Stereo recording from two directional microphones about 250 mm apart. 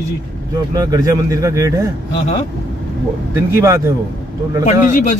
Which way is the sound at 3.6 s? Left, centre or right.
Centre.